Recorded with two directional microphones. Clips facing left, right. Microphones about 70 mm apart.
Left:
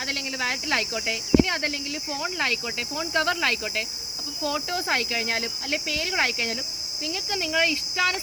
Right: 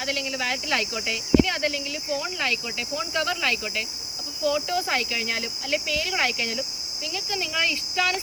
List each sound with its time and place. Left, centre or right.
0.0 s speech: left